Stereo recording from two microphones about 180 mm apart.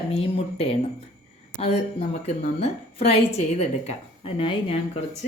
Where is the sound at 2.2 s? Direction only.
35° left (ahead or behind).